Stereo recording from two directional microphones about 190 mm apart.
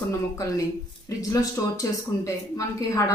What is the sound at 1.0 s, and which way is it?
A woman's voice, 20° left (ahead or behind).